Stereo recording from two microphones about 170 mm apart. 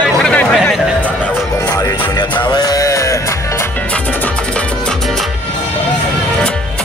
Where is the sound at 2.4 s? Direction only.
25° left (ahead or behind).